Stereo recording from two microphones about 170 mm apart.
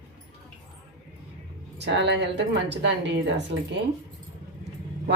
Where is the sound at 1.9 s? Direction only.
90° right.